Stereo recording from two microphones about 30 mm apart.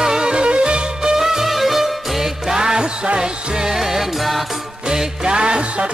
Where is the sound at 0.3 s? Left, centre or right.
Right.